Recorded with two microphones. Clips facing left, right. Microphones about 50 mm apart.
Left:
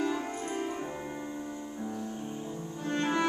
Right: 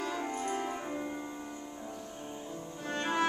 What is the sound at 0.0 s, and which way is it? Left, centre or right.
Music, centre.